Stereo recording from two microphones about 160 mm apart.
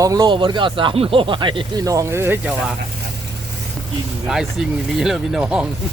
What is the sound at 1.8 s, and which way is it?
Speech, 20° right (ahead or behind).